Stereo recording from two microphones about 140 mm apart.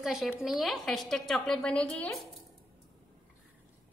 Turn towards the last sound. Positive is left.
turn(degrees=5)  # may be behind; listen again after turning